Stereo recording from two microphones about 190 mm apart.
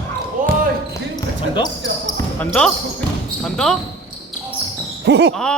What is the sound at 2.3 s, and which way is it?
Speech, 5° left (ahead or behind).